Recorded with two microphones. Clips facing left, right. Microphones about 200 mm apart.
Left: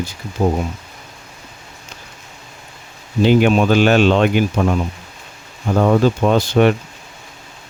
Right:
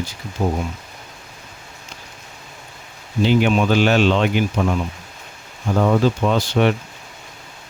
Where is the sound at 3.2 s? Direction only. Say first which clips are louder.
Left 4 dB; 45° left (ahead or behind).